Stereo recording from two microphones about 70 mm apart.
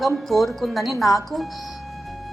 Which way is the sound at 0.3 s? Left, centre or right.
Centre.